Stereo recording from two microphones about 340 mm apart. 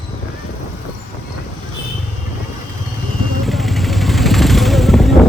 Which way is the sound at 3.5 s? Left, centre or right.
Centre.